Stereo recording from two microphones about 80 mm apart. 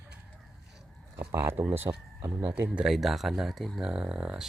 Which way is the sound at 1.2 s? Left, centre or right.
Right.